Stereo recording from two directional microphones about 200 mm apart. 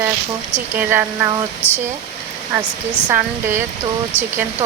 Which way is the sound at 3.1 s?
10° right (ahead or behind).